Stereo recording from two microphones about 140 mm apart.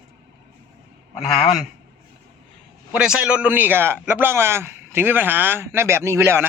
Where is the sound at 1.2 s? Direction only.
Centre (ahead or behind).